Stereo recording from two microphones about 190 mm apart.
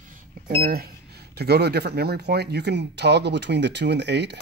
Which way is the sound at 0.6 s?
50° right (ahead or behind).